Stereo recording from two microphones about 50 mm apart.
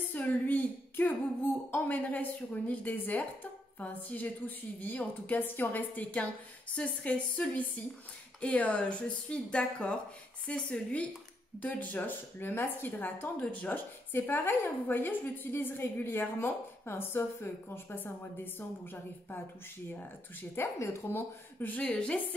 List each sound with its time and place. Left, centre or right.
0.1 s a woman's voice: left
20.5 s speech: left
21.1 s a woman's voice: left
21.7 s speech: left